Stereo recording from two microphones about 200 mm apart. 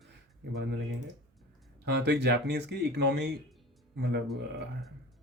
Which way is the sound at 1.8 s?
60° right (ahead or behind).